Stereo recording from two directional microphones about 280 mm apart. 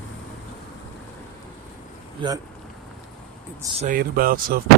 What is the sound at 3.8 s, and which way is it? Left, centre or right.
Speech, right.